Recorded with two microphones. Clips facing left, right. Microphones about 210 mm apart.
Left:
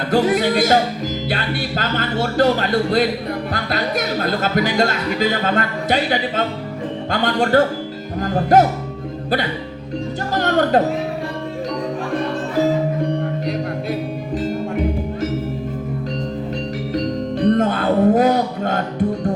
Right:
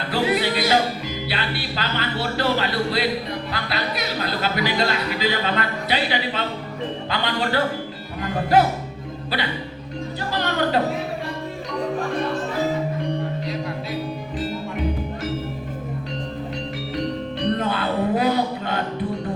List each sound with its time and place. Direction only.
0.1 s speech: 45° left (ahead or behind)
7.1 s music: 45° left (ahead or behind)
8.2 s speech: 45° left (ahead or behind)
10.3 s music: 45° left (ahead or behind)
17.5 s music: 45° left (ahead or behind)